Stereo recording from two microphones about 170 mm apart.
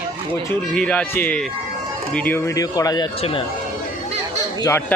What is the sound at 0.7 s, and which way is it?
Speech, 10° left (ahead or behind).